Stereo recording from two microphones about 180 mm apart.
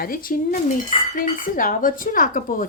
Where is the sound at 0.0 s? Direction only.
50° left (ahead or behind).